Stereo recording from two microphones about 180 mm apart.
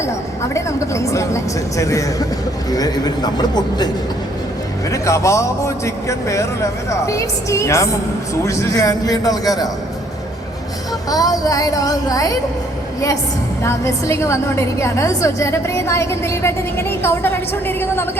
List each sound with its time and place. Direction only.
0.5 s a woman's voice: 15° left (ahead or behind)
4.9 s a woman's voice: 15° left (ahead or behind)
11.1 s speech: 20° left (ahead or behind)
13.6 s a woman's voice: 15° left (ahead or behind)